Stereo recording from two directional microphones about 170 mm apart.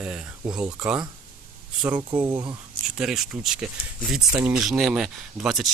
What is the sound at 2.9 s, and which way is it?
Speech, 5° right (ahead or behind).